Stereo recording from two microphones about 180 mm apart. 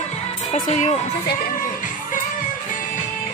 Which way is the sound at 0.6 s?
40° left (ahead or behind).